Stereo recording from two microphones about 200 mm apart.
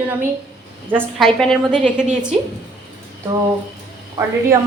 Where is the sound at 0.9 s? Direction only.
Centre (ahead or behind).